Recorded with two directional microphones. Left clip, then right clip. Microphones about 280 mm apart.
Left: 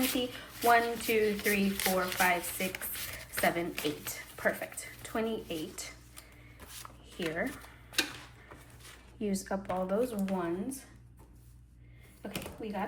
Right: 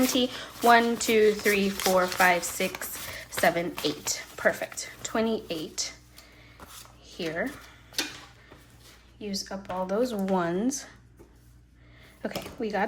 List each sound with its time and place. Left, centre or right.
0.0 s speech: centre
7.2 s speech: centre
9.2 s speech: centre
9.6 s speech: centre
10.2 s speech: centre
12.6 s speech: centre